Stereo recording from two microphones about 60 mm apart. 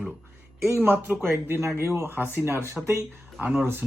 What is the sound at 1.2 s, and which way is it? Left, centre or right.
Speech, right.